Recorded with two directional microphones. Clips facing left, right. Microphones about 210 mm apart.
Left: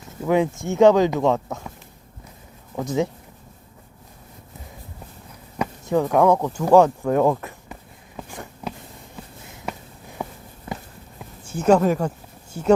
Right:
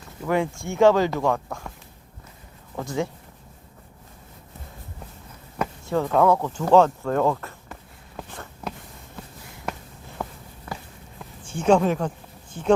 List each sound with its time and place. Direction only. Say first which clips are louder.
0.3 s speech: left 4 dB; 20° left (ahead or behind)
2.7 s speech: left 4 dB; 20° left (ahead or behind)
5.8 s speech: left 3 dB; 15° left (ahead or behind)
8.3 s a sound: left 2 dB; 10° left (ahead or behind)
10.7 s walk: left 3 dB; 20° left (ahead or behind)
11.4 s speech: left 2 dB; 5° left (ahead or behind)